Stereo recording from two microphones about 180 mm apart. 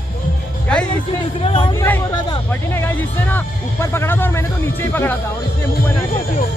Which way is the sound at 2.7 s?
10° left (ahead or behind).